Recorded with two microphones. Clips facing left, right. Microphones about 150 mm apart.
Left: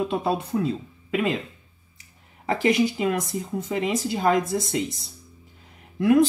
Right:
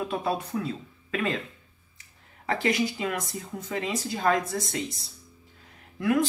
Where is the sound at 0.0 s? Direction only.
20° left (ahead or behind).